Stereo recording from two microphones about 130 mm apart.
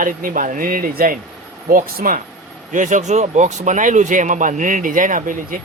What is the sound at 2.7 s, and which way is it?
Speech, 75° right (ahead or behind).